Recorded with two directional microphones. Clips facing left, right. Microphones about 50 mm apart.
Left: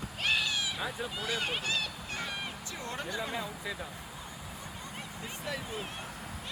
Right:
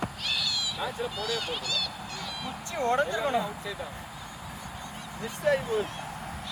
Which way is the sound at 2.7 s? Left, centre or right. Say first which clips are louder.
Right 12 dB; right.